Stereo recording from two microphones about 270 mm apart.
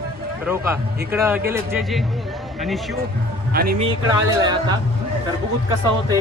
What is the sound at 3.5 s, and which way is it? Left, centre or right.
Speech, right.